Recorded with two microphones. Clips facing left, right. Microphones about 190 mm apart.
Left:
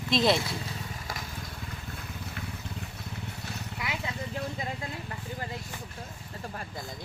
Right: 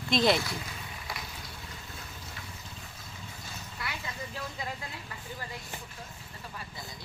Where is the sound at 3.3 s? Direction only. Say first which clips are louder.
Left 6 dB; 65° left (ahead or behind).